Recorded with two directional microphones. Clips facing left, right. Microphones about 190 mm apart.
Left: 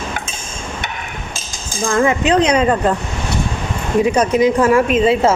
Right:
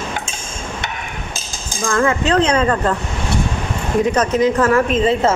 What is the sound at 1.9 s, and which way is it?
Speech, 15° left (ahead or behind).